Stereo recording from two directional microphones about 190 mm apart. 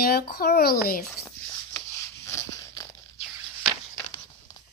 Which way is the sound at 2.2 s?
15° left (ahead or behind).